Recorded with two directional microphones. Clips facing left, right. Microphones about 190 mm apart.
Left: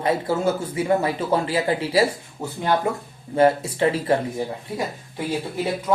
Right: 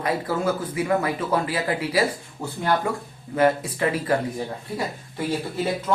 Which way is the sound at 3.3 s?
30° left (ahead or behind).